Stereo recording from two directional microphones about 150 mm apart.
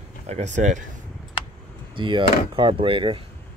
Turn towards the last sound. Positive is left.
turn(degrees=-35)  # may be behind; listen again after turning